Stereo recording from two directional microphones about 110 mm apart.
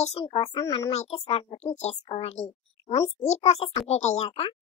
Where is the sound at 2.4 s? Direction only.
50° left (ahead or behind).